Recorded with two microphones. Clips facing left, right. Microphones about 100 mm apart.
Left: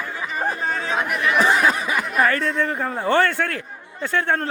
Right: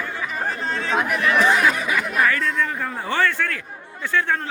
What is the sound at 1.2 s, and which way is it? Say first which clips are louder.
Chatter: left 1 dB; 15° left (ahead or behind).